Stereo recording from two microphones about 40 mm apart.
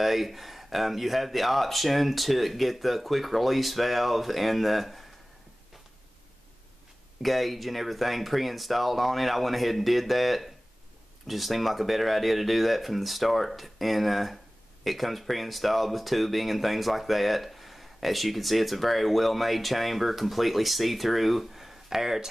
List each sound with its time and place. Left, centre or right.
0.0 s speech: centre
7.2 s speech: centre